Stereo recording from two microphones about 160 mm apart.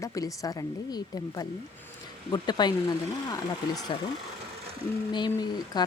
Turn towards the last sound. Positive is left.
turn(degrees=25)  # may be behind; listen again after turning